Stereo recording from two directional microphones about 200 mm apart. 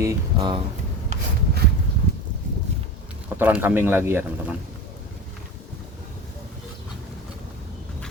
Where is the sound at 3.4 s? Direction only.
10° right (ahead or behind).